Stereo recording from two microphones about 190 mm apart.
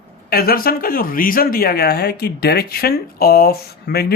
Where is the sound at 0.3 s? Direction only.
55° left (ahead or behind).